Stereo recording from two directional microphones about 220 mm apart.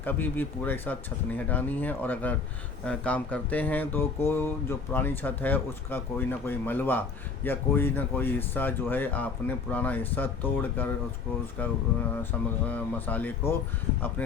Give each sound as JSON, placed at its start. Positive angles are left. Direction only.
{"t": 0.0, "sound": "speech", "side_deg": 10}